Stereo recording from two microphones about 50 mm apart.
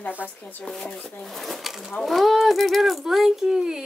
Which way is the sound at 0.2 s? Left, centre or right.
Left.